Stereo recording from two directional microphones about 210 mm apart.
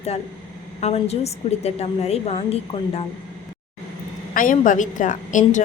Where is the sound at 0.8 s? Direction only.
30° left (ahead or behind).